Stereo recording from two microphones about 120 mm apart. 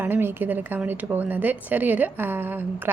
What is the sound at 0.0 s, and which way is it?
A woman's voice, 15° right (ahead or behind).